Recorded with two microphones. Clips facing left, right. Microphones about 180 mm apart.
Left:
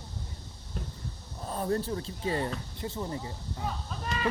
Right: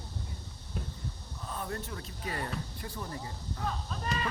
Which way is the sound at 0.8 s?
5° right (ahead or behind).